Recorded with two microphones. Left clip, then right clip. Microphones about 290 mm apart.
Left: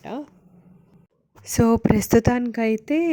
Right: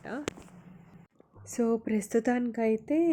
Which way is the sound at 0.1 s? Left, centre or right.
Centre.